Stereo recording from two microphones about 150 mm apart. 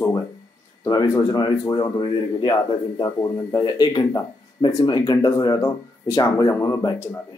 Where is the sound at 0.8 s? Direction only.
25° left (ahead or behind).